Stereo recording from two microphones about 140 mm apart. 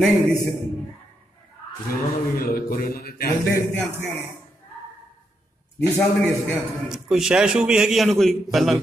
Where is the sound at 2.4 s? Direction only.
90° left.